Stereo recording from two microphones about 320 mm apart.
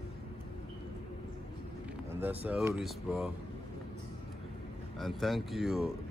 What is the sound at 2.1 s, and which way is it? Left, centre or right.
Speech, centre.